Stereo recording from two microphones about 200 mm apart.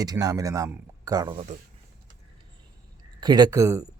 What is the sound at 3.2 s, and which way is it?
Speech, 20° right (ahead or behind).